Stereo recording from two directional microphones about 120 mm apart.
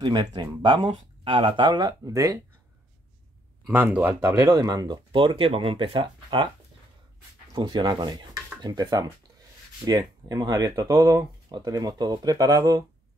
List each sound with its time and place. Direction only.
0.0 s speech: 40° right (ahead or behind)
3.7 s speech: 15° right (ahead or behind)
4.2 s speech: 30° right (ahead or behind)
7.5 s speech: 40° right (ahead or behind)